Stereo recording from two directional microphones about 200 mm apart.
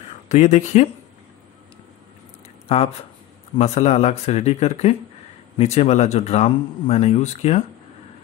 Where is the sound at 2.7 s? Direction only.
30° left (ahead or behind).